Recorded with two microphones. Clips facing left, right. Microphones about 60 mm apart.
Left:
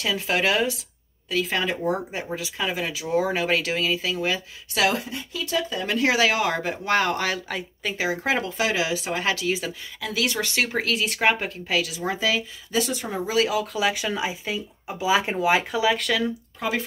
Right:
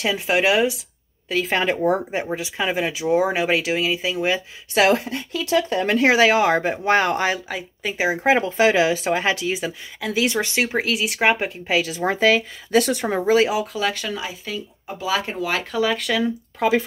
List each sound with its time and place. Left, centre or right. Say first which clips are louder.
0.0 s speech: right 4 dB; centre
1.3 s speech: right 4 dB; right
4.9 s speech: right 5 dB; right
5.9 s speech: right 5 dB; right
7.3 s speech: right 1 dB; centre
8.0 s speech: right 6 dB; right
10.9 s speech: right 2 dB; centre; by 12.0 s right
12.0 s speech: right 7 dB; right
13.7 s speech: even; centre